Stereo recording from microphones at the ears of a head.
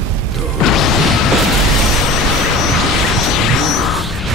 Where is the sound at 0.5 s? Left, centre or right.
Left.